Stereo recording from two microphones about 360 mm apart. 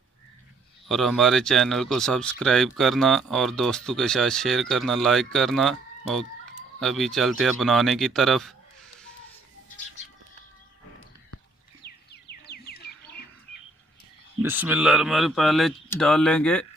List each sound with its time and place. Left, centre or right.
0.9 s speech: centre
11.8 s a sound: left
14.4 s speech: centre